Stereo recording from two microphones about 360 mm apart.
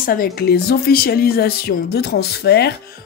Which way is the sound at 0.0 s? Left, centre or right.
Left.